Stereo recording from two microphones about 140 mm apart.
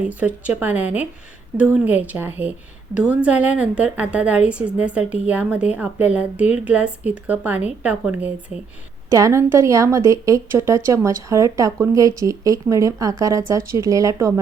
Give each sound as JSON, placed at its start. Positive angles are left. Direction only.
{"t": 0.2, "sound": "a woman's voice", "side_deg": -10}
{"t": 9.0, "sound": "a woman's voice", "side_deg": -20}